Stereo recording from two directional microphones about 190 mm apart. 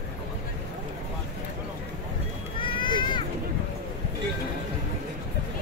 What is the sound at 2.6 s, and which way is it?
Cat, 25° left (ahead or behind).